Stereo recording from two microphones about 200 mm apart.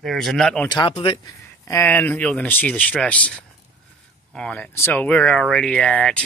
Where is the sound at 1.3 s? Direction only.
15° left (ahead or behind).